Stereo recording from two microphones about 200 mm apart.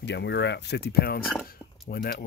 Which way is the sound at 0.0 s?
60° left (ahead or behind).